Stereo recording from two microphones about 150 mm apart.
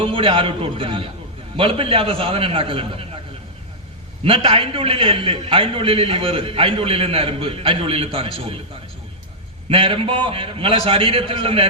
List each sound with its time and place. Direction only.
0.0 s a man's voice: 35° right (ahead or behind)
4.2 s a man's voice: 35° right (ahead or behind)
9.6 s a man's voice: 35° right (ahead or behind)